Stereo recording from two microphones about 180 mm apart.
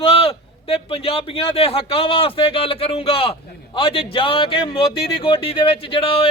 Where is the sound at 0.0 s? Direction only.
30° left (ahead or behind).